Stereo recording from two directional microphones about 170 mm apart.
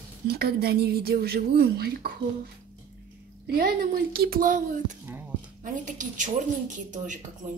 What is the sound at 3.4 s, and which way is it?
A woman's voice, 65° right (ahead or behind).